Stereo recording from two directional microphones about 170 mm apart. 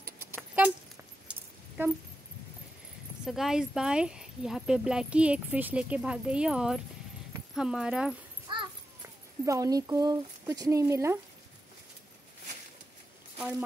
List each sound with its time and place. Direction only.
0.0 s keys jangling: 15° right (ahead or behind)
1.8 s a sound: 10° right (ahead or behind)
3.3 s speech: centre (ahead or behind)
8.5 s a sound: 30° right (ahead or behind)
9.5 s speech: 20° right (ahead or behind)
13.4 s speech: 5° right (ahead or behind)